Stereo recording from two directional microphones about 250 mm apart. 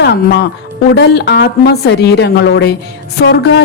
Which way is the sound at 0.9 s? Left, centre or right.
Left.